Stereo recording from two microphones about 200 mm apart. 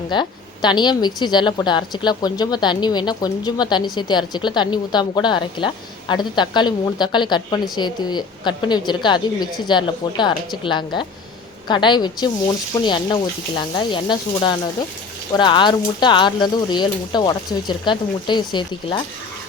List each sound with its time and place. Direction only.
0.1 s a woman's voice: 20° left (ahead or behind)